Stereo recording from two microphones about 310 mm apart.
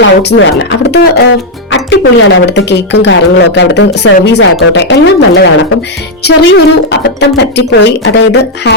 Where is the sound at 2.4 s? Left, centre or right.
Left.